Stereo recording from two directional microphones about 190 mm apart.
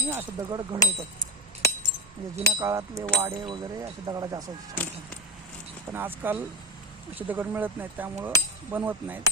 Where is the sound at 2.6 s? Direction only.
15° right (ahead or behind).